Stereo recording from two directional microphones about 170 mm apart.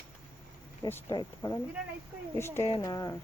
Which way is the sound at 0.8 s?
25° left (ahead or behind).